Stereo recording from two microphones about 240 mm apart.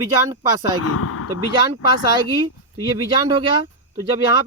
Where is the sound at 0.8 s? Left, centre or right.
Left.